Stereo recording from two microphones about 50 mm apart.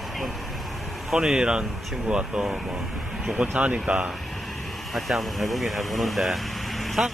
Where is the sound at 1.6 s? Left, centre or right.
Centre.